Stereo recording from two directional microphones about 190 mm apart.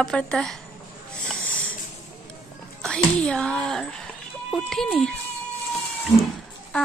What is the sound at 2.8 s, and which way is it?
A woman's voice, 5° left (ahead or behind).